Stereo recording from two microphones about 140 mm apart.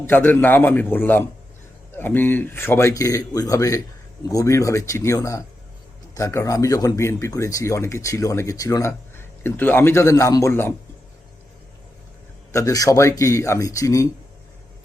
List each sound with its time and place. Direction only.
0.0 s speech: 15° left (ahead or behind)
12.5 s speech: 20° left (ahead or behind)